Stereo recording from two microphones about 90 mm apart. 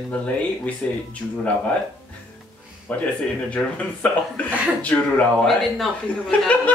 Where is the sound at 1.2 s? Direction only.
Centre (ahead or behind).